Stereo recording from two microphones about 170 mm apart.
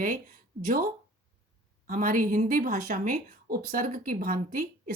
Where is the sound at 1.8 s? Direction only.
50° right (ahead or behind).